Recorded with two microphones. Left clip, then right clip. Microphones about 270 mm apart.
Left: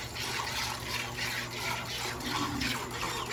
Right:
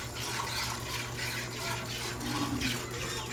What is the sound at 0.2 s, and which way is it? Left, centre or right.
Fill, centre.